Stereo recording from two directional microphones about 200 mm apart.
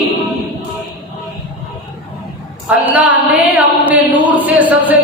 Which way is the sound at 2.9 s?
5° right (ahead or behind).